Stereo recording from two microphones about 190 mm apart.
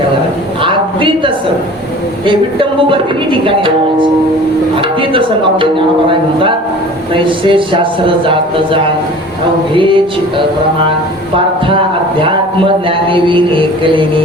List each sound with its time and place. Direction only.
0.6 s a man's voice: 25° right (ahead or behind)
2.2 s music: 25° right (ahead or behind)
4.8 s speech: 25° right (ahead or behind)
7.1 s music: 25° right (ahead or behind)
13.1 s music: 25° right (ahead or behind)